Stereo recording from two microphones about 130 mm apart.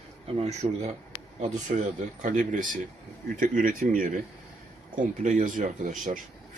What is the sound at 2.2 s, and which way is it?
Speech, 85° right.